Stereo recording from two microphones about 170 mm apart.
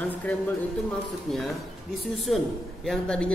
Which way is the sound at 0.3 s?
5° left (ahead or behind).